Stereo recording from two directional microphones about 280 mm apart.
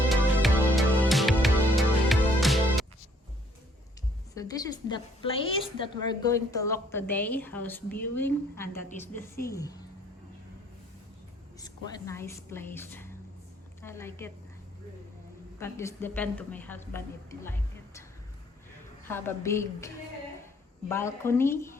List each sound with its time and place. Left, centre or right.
0.1 s music: centre
4.4 s a woman's voice: centre
11.6 s a woman's voice: centre
15.5 s a woman's voice: centre
19.0 s a woman's voice: centre
20.9 s a woman's voice: centre